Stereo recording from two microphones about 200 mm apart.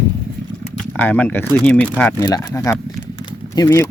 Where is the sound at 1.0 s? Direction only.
5° left (ahead or behind).